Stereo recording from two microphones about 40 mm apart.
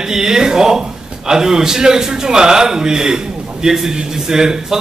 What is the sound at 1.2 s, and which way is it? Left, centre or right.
A man's voice, centre.